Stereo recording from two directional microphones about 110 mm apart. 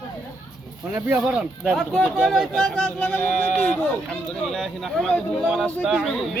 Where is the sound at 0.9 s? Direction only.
15° right (ahead or behind).